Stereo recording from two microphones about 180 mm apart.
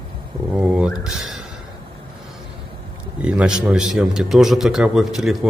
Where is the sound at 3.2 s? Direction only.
5° right (ahead or behind).